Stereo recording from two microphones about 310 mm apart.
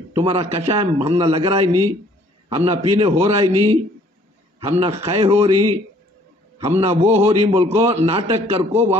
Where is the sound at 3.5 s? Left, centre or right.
Right.